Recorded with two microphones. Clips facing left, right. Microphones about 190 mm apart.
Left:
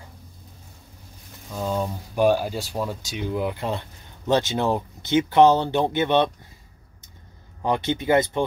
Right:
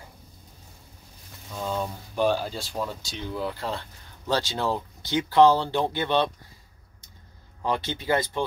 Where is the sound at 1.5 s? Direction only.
15° left (ahead or behind).